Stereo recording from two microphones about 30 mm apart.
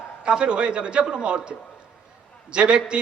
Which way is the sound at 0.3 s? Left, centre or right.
Right.